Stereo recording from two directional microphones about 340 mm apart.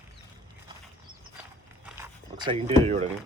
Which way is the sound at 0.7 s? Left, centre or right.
Centre.